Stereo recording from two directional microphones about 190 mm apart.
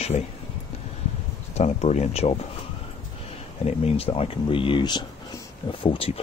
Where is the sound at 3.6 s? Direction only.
30° left (ahead or behind).